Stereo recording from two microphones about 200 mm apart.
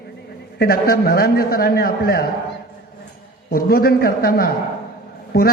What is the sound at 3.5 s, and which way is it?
A man's voice, 50° left (ahead or behind).